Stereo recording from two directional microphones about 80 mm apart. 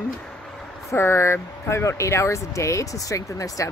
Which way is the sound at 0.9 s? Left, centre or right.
Left.